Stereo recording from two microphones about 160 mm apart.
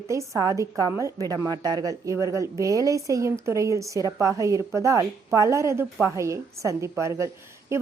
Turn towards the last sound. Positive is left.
turn(degrees=-20)  # may be behind; listen again after turning